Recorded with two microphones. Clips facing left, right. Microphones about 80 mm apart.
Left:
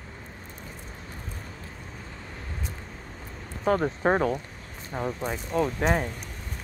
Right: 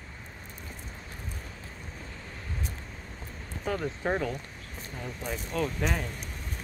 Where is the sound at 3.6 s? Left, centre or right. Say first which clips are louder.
Left 7 dB; left.